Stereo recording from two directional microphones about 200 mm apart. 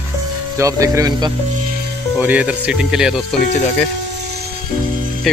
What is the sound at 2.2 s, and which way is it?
Speech, 5° right (ahead or behind).